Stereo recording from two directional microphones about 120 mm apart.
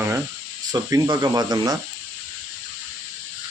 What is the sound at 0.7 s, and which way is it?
Speech, 30° right (ahead or behind).